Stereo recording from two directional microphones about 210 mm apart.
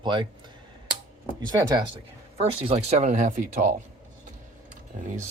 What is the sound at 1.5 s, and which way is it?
Speech, 20° right (ahead or behind).